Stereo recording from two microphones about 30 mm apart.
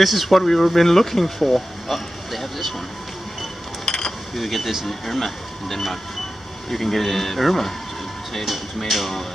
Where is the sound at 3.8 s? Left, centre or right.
Centre.